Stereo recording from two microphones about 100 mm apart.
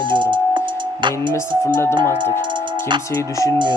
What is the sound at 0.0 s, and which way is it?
Music, 50° right (ahead or behind).